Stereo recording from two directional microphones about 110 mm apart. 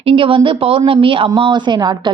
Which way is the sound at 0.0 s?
55° right (ahead or behind).